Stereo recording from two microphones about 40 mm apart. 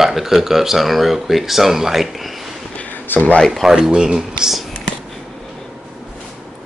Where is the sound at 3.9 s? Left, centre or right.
Centre.